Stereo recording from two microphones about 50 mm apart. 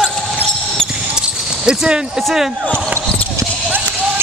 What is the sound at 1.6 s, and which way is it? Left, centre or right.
Speech, centre.